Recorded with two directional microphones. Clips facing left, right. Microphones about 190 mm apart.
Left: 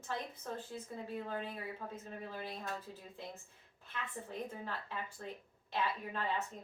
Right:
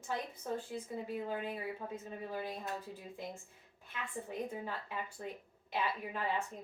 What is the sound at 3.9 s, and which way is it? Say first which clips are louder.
A woman's voice: right 2 dB; 15° right (ahead or behind).